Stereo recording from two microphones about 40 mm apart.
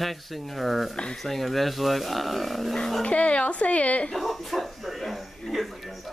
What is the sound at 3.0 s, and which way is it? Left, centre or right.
Speech, left.